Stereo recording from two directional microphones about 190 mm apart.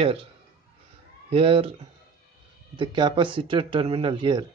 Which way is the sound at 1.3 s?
30° right (ahead or behind).